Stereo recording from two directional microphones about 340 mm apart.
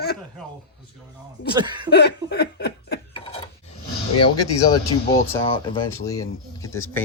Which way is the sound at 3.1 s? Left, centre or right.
Centre.